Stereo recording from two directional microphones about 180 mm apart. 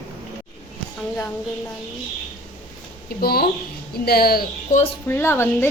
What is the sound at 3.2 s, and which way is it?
Speech, 60° left (ahead or behind).